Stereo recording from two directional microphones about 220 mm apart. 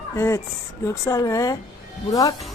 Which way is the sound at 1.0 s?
15° left (ahead or behind).